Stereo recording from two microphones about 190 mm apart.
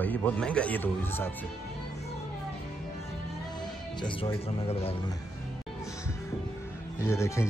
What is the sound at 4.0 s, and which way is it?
Speech, 25° left (ahead or behind).